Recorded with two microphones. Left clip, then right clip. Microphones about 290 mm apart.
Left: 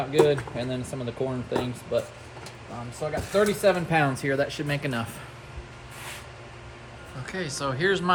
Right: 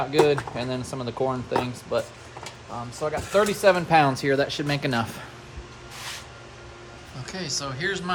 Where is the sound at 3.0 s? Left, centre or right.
Centre.